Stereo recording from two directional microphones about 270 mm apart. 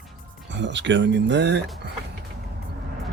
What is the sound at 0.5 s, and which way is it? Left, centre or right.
Speech, right.